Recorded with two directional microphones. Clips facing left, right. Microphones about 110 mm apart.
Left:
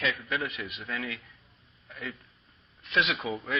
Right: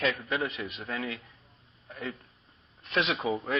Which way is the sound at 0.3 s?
30° right (ahead or behind).